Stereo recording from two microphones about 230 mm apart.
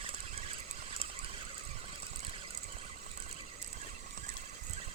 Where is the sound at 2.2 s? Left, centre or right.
Right.